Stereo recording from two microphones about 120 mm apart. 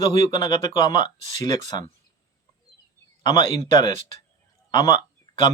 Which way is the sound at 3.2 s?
35° left (ahead or behind).